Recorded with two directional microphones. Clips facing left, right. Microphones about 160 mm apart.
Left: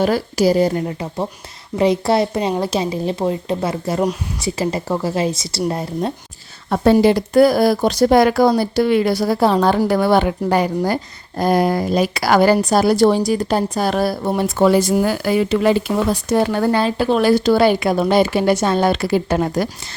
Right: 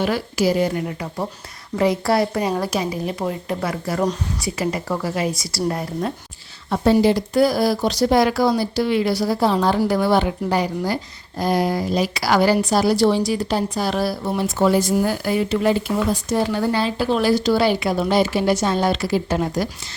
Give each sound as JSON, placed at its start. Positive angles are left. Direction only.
{"t": 0.0, "sound": "speech", "side_deg": 40}
{"t": 6.7, "sound": "a woman's voice", "side_deg": 55}
{"t": 16.3, "sound": "speech", "side_deg": 60}